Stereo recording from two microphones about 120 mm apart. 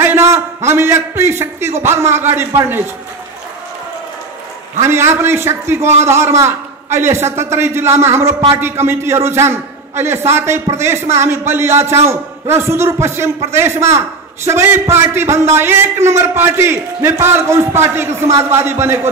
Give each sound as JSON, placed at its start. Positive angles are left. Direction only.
{"t": 0.0, "sound": "a sound", "side_deg": -20}
{"t": 0.7, "sound": "a man's voice", "side_deg": -20}
{"t": 4.7, "sound": "a man's voice", "side_deg": -20}